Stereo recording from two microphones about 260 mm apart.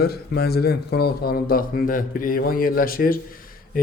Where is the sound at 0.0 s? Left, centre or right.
Left.